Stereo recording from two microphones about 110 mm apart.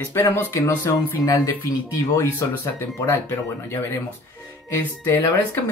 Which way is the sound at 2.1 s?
25° left (ahead or behind).